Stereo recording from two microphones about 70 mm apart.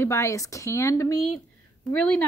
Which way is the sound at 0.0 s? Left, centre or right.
Left.